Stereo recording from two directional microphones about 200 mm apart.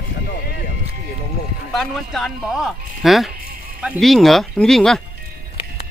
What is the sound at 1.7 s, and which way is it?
Speech, centre (ahead or behind).